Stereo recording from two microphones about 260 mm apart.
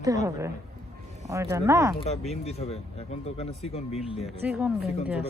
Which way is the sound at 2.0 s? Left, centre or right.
Left.